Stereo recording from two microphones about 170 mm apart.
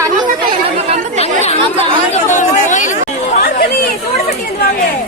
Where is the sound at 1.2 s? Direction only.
40° left (ahead or behind).